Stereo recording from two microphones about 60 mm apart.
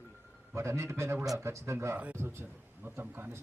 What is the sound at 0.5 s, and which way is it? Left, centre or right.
A man's voice, right.